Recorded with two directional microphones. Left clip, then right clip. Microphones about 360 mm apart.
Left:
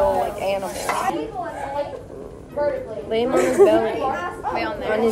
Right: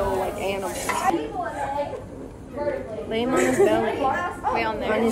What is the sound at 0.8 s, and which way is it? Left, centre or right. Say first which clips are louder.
Speech: right 1 dB; left.